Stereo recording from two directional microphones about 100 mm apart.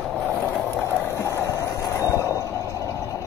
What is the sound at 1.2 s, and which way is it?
Vehicle, 30° left (ahead or behind).